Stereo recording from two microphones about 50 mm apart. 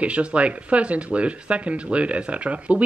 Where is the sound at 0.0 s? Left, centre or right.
Right.